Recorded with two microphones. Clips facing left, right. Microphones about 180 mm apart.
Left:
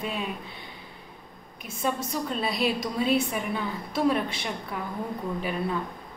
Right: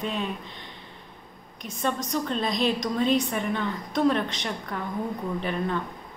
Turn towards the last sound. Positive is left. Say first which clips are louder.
# right 1 dB
turn(degrees=10)  # may be behind; listen again after turning